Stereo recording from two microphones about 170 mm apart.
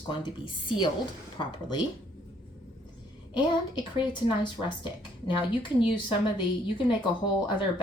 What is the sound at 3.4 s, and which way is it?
Speech, 25° left (ahead or behind).